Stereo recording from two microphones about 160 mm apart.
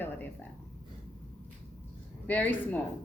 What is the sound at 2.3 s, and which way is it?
Speech, 10° left (ahead or behind).